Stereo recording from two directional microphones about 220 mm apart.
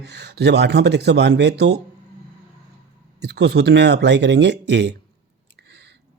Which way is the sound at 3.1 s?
50° right (ahead or behind).